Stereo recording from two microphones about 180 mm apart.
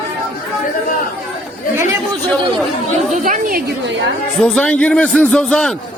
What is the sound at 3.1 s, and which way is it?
Speech, 50° right (ahead or behind).